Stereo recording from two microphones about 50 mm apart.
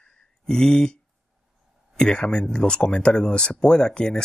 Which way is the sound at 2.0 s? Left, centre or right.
Centre.